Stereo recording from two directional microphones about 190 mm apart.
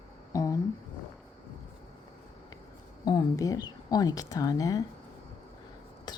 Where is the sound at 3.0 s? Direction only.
20° left (ahead or behind).